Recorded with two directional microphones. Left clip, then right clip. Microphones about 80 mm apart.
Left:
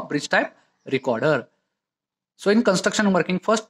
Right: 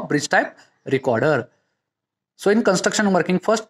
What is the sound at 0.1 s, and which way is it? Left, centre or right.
Speech, right.